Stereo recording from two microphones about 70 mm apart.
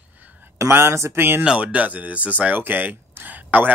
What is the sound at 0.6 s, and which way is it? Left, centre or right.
Speech, right.